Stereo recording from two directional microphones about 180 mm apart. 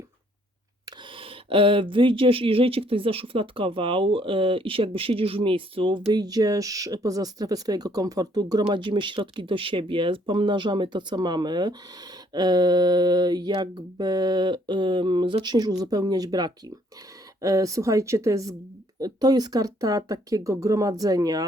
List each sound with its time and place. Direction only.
0.9 s a woman's voice: 30° right (ahead or behind)